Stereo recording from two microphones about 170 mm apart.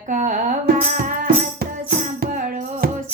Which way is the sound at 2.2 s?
60° right (ahead or behind).